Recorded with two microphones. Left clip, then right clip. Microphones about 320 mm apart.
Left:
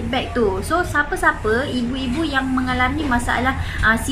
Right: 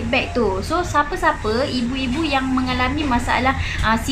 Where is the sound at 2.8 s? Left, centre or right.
Centre.